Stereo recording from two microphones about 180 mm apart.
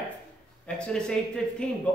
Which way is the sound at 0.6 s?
5° left (ahead or behind).